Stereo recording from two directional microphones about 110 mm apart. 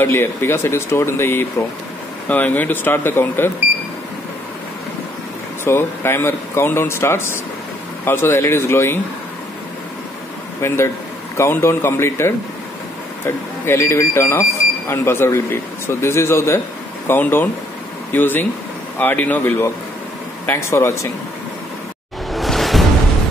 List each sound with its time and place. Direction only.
0.0 s speech: 20° left (ahead or behind)
5.6 s speech: 20° left (ahead or behind)
11.3 s speech: 20° left (ahead or behind)
13.7 s speech: 25° left (ahead or behind)
22.3 s music: centre (ahead or behind)